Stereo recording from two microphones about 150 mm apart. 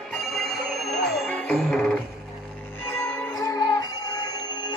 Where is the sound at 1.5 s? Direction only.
5° left (ahead or behind).